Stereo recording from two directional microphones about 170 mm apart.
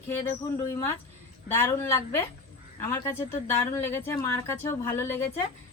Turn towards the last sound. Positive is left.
turn(degrees=15)  # may be behind; listen again after turning